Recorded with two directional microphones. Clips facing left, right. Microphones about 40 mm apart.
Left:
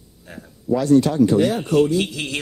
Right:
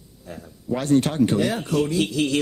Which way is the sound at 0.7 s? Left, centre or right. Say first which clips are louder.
Left 4 dB; right.